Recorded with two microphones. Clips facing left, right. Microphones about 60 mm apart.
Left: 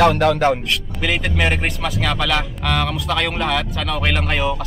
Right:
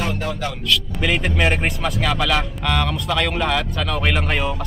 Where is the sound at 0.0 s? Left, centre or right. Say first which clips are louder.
Left 11 dB; left.